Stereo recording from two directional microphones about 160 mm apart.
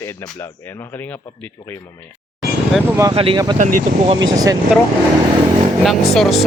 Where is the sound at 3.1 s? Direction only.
35° right (ahead or behind).